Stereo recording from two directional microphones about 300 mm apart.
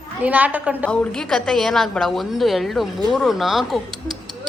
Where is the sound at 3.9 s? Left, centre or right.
Centre.